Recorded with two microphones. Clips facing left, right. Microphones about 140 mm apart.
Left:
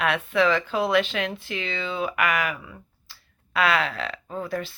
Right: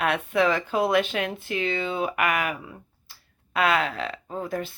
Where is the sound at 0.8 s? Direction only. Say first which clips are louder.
Right 2 dB; 50° right (ahead or behind).